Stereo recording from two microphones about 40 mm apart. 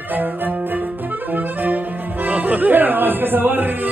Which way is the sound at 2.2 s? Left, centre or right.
Right.